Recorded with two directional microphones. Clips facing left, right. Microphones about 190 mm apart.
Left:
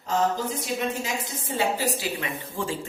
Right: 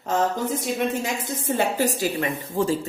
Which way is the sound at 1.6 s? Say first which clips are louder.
Right 2 dB; 50° right (ahead or behind).